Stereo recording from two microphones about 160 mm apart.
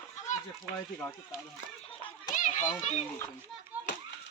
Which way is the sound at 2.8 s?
45° left (ahead or behind).